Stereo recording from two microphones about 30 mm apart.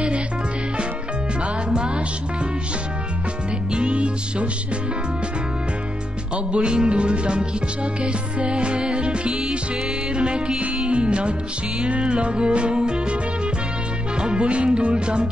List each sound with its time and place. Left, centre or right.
3.7 s music: right
6.3 s music: right
14.2 s music: right